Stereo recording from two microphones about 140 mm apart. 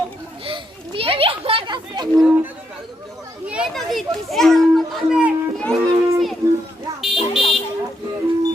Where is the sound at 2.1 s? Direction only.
10° right (ahead or behind).